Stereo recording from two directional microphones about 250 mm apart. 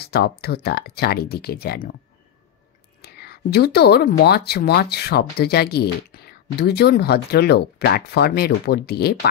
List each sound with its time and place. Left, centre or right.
0.0 s speech: left
3.2 s speech: left